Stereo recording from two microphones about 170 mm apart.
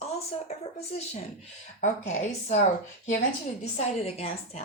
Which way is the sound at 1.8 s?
45° left (ahead or behind).